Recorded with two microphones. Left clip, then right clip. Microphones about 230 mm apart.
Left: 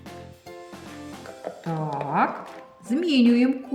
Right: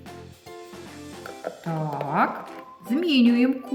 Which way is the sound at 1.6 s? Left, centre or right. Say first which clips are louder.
Left 1 dB; centre.